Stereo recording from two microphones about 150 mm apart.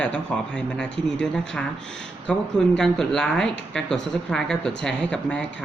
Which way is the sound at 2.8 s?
5° left (ahead or behind).